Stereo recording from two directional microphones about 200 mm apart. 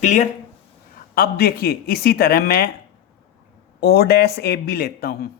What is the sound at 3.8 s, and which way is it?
Speech, 55° left (ahead or behind).